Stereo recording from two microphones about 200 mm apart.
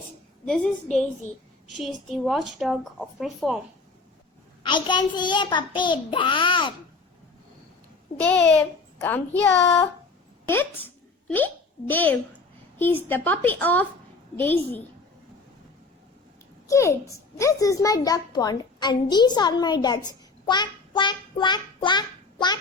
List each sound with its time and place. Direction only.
0.4 s a woman's voice: 5° left (ahead or behind)
1.7 s a woman's voice: centre (ahead or behind)
4.6 s a child's voice: 20° left (ahead or behind)
8.2 s a woman's voice: 5° left (ahead or behind)
16.6 s a child's voice: 15° left (ahead or behind)